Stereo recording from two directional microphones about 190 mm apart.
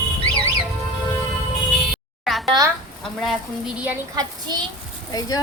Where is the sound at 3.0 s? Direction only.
Centre (ahead or behind).